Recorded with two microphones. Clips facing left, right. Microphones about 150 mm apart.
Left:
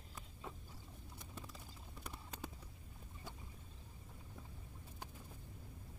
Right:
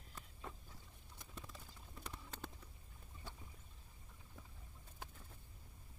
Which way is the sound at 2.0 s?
10° left (ahead or behind).